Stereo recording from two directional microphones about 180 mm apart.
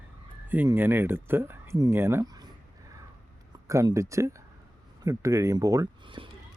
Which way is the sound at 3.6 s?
15° right (ahead or behind).